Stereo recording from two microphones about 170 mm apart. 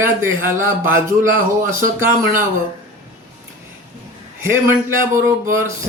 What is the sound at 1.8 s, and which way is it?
Speech, 15° right (ahead or behind).